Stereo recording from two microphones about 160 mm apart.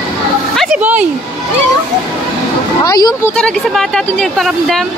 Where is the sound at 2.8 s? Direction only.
25° left (ahead or behind).